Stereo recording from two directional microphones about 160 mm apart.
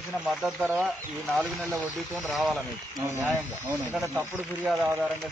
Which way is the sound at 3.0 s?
15° right (ahead or behind).